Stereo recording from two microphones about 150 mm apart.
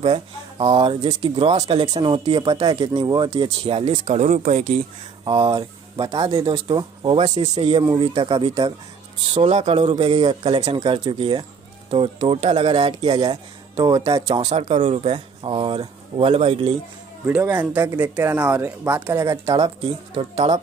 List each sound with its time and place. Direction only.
0.0 s speech: 40° right (ahead or behind)
3.4 s speech: 40° right (ahead or behind)
5.2 s speech: 30° right (ahead or behind)
14.4 s speech: 45° right (ahead or behind)
17.3 s speech: 10° right (ahead or behind)
20.2 s speech: 40° right (ahead or behind)